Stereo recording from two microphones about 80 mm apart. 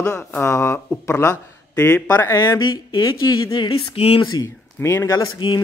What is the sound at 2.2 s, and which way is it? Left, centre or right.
Speech, left.